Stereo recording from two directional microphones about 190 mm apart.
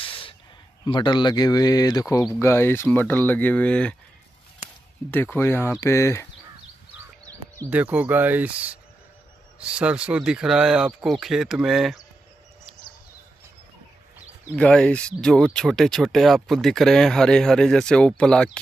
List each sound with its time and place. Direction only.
0.0 s a sound: 30° left (ahead or behind)
0.8 s speech: 25° left (ahead or behind); by 3.9 s 5° left (ahead or behind)
5.1 s speech: 10° left (ahead or behind)
7.2 s speech: 15° right (ahead or behind); by 12.0 s centre (ahead or behind)
14.5 s speech: 5° left (ahead or behind)